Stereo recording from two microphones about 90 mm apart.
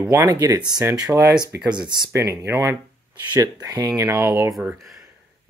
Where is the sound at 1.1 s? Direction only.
10° right (ahead or behind).